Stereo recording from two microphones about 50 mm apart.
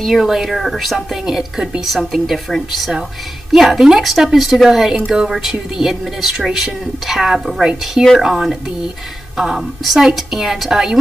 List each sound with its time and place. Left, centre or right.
0.0 s a woman's voice: centre